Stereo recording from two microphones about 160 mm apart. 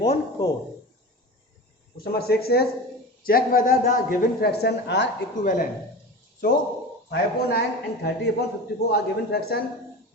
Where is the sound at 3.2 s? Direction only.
65° left (ahead or behind); by 5.0 s 90° left.